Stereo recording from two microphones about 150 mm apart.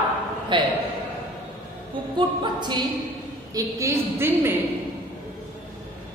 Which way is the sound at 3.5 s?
20° right (ahead or behind).